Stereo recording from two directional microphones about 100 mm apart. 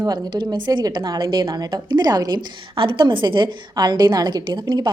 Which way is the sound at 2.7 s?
55° right (ahead or behind).